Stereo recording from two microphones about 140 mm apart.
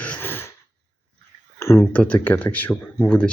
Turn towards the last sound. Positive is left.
turn(degrees=10)  # may be behind; listen again after turning